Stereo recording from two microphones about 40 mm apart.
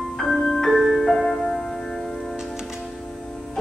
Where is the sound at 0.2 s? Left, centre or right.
Centre.